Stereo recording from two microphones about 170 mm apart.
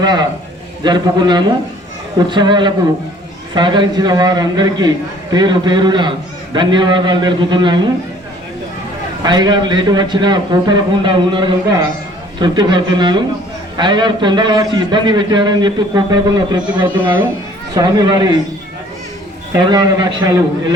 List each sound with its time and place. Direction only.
0.0 s a man's voice: 25° right (ahead or behind)
9.2 s a man's voice: 25° right (ahead or behind)
19.5 s a man's voice: 25° right (ahead or behind)